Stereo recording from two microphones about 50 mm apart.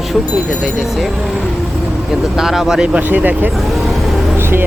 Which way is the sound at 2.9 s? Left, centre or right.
Right.